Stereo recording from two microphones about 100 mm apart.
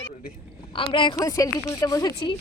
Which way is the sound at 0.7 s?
55° left (ahead or behind).